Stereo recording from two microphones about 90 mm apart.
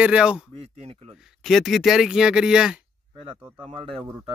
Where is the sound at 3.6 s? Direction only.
85° right.